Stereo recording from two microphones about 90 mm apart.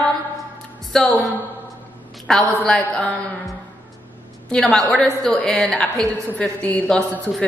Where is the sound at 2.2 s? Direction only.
5° left (ahead or behind).